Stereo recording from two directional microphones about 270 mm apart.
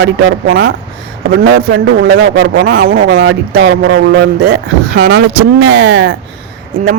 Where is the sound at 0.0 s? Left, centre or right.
Right.